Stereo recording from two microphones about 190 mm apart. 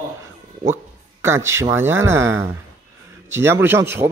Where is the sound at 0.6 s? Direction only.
15° right (ahead or behind).